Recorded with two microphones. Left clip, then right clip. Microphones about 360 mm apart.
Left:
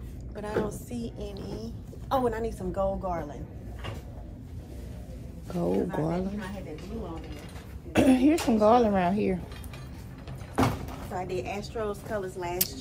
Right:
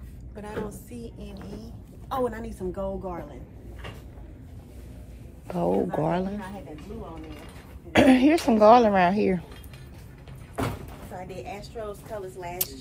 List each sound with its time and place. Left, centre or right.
0.4 s a woman's voice: centre
5.5 s speech: centre
7.9 s speech: centre
11.4 s speech: centre